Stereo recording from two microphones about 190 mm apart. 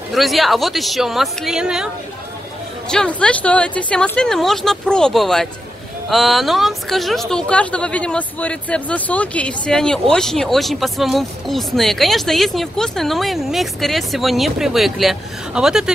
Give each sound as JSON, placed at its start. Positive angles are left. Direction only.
{"t": 0.1, "sound": "speech", "side_deg": 0}
{"t": 2.9, "sound": "speech", "side_deg": 5}